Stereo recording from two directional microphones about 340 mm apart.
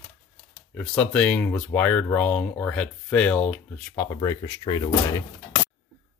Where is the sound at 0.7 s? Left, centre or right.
Centre.